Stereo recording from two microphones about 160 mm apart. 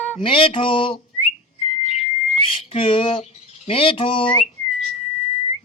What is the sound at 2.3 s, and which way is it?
Squawk, 40° left (ahead or behind).